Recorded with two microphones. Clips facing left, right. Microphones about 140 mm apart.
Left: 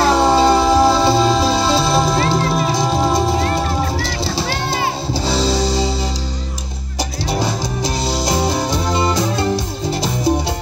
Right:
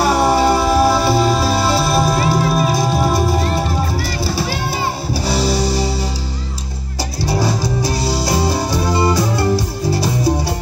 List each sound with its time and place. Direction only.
0.1 s music: 20° left (ahead or behind)
1.6 s music: 5° right (ahead or behind)
3.0 s music: 20° left (ahead or behind)
5.4 s music: 20° left (ahead or behind)
7.2 s music: 20° left (ahead or behind)